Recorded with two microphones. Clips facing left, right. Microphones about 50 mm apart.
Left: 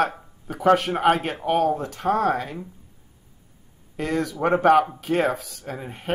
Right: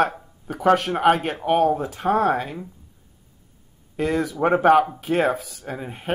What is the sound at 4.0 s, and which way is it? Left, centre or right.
Speech, centre.